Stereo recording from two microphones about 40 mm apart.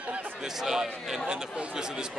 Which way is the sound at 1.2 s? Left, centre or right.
Right.